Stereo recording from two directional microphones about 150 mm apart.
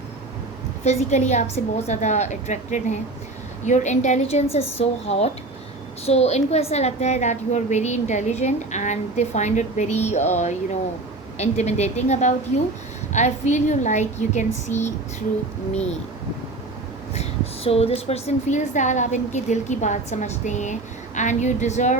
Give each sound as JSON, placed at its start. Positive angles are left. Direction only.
{"t": 0.9, "sound": "a woman's voice", "side_deg": 50}
{"t": 17.2, "sound": "a woman's voice", "side_deg": 40}